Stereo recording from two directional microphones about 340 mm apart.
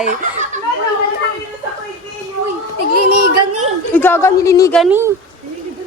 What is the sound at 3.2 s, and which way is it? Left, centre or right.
Speech, right.